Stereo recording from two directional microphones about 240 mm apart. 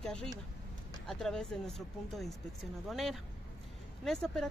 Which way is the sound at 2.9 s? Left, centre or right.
Centre.